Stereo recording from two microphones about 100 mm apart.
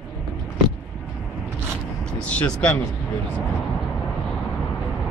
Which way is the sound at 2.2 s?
15° left (ahead or behind).